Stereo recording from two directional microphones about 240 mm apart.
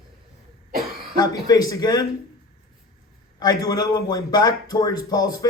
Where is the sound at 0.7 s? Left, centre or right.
Right.